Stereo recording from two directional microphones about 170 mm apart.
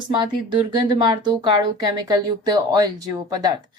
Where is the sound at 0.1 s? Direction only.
25° right (ahead or behind).